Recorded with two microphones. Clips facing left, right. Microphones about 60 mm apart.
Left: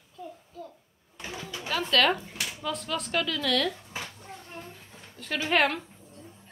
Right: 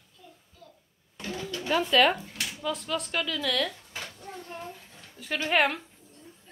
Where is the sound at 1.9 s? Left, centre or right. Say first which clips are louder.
Right 1 dB; centre.